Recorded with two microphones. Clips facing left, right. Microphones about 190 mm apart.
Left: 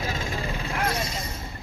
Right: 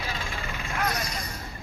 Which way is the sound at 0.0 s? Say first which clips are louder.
Left 5 dB; 45° left (ahead or behind).